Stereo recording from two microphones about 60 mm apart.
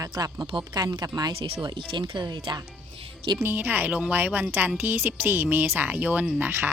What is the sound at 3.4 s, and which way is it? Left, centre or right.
A woman's voice, right.